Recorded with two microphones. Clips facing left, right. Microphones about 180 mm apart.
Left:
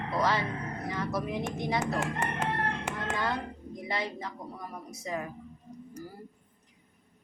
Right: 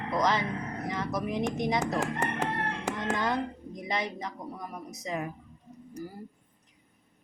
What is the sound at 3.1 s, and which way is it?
Speech, 20° right (ahead or behind).